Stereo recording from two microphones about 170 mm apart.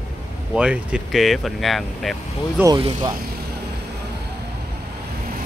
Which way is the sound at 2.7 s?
25° right (ahead or behind).